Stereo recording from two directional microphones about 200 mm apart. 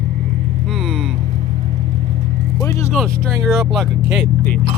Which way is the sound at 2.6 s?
15° left (ahead or behind).